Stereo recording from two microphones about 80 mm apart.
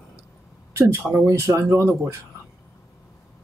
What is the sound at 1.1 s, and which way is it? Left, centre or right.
Speech, right.